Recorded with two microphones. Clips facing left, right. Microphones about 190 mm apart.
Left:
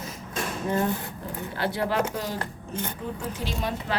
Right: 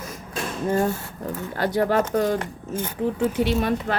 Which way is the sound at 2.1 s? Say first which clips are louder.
Right 9 dB; 55° right (ahead or behind).